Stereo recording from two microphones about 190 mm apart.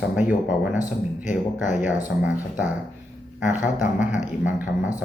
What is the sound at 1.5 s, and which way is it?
Speech, 40° left (ahead or behind).